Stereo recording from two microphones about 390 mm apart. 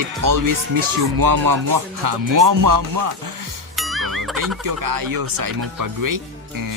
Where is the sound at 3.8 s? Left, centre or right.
Centre.